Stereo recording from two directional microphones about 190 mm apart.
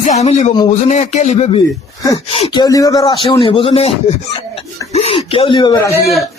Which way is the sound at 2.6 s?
20° left (ahead or behind).